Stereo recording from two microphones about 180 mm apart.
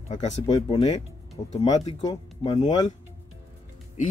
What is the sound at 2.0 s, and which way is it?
Speech, 25° left (ahead or behind).